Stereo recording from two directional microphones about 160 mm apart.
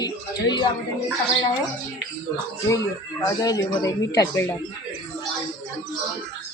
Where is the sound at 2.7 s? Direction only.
20° left (ahead or behind).